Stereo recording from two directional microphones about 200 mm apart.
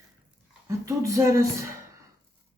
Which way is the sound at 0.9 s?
15° right (ahead or behind).